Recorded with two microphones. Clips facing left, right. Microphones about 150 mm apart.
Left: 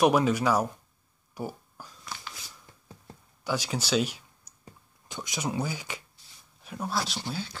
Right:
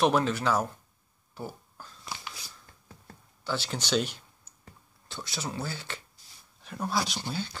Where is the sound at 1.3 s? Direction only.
10° left (ahead or behind).